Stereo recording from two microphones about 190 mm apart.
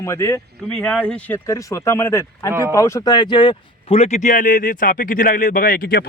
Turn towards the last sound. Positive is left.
turn(degrees=50)  # may be behind; listen again after turning